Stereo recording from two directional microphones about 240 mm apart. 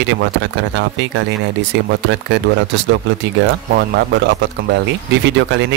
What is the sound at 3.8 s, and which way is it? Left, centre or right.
Speech, right.